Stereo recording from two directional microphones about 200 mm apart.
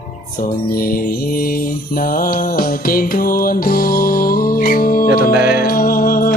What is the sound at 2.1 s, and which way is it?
Music, 45° left (ahead or behind).